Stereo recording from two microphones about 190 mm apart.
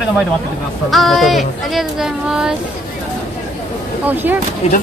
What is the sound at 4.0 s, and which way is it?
Speech, 10° right (ahead or behind).